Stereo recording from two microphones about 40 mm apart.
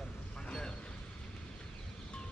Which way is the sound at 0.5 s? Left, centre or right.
Centre.